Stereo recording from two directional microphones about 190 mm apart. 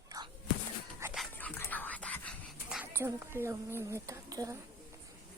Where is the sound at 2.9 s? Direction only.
15° right (ahead or behind).